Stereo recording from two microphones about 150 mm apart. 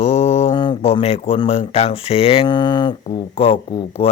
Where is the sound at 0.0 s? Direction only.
45° left (ahead or behind).